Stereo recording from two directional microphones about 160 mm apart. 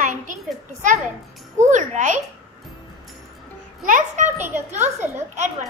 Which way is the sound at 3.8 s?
50° right (ahead or behind).